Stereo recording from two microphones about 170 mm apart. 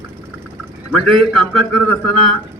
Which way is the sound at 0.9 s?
5° left (ahead or behind).